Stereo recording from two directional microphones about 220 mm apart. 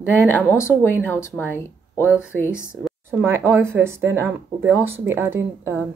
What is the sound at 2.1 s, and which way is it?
Speech, 5° right (ahead or behind).